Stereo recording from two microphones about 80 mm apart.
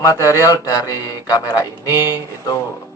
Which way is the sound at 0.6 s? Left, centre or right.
Left.